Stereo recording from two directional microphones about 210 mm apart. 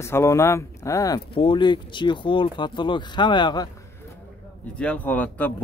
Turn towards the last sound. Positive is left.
turn(degrees=5)  # may be behind; listen again after turning